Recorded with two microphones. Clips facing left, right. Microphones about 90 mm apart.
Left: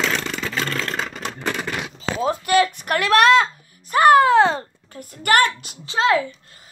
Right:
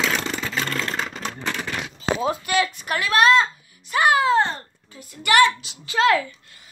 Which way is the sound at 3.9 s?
45° left (ahead or behind).